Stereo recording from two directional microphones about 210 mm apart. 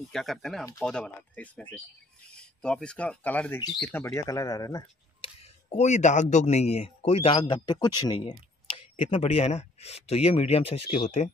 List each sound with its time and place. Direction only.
0.1 s speech: centre (ahead or behind); by 5.3 s 15° left (ahead or behind)
5.7 s a man's voice: 35° left (ahead or behind)